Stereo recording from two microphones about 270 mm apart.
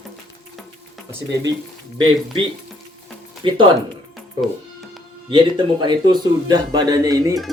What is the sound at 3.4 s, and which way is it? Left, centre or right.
Speech, centre.